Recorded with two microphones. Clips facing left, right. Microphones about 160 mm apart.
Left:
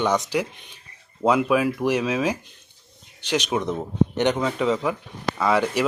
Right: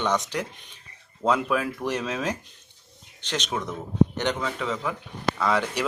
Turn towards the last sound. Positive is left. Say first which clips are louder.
# left 4 dB
turn(degrees=10)  # may be behind; listen again after turning